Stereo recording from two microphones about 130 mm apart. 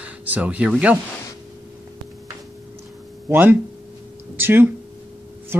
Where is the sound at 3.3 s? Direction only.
15° right (ahead or behind).